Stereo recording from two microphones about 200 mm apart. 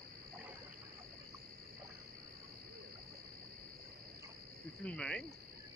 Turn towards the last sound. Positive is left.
turn(degrees=5)  # may be behind; listen again after turning